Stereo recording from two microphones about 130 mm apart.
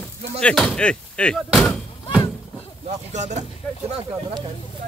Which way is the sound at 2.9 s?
65° right (ahead or behind).